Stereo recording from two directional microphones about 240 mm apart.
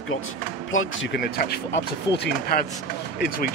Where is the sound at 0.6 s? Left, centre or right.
Left.